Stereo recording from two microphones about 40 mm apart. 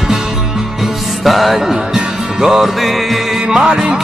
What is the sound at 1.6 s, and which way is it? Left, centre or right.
Music, centre.